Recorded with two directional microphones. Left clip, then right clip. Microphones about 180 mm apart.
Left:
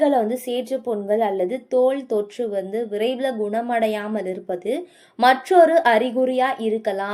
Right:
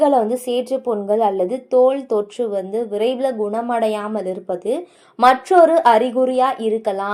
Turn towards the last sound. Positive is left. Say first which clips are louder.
# right 3 dB
turn(degrees=0)  # may be behind; listen again after turning